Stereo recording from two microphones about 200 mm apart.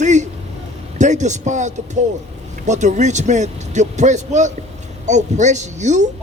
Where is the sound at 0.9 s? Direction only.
35° right (ahead or behind).